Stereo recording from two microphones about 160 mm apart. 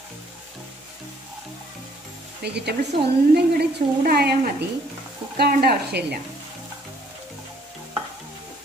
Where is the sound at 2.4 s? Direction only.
90° right.